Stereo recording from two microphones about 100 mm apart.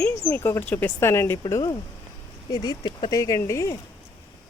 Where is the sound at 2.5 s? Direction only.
45° left (ahead or behind).